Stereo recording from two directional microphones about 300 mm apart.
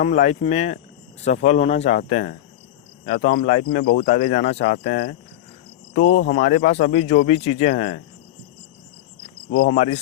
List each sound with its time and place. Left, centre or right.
0.0 s speech: left
9.5 s speech: left